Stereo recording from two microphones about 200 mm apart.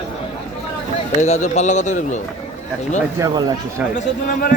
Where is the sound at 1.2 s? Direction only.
35° left (ahead or behind).